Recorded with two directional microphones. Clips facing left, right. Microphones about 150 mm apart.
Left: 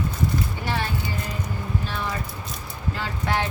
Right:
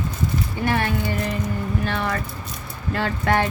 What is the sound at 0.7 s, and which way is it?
Speech, 55° right (ahead or behind).